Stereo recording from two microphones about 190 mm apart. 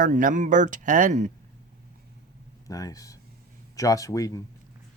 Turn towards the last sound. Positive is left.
turn(degrees=20)  # may be behind; listen again after turning